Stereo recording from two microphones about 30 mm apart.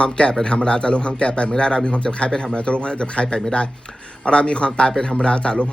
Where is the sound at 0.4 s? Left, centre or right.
Left.